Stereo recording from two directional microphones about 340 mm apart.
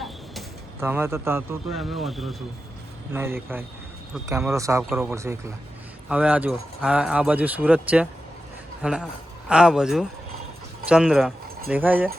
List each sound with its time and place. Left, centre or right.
0.0 s speech: centre